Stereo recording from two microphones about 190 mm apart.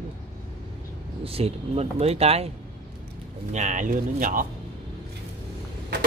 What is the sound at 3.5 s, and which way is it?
Speech, 40° right (ahead or behind).